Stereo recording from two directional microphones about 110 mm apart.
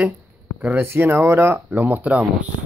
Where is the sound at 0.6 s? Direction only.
15° right (ahead or behind).